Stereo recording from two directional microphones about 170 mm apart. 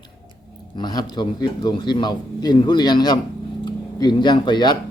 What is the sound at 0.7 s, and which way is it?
A man's voice, 25° left (ahead or behind).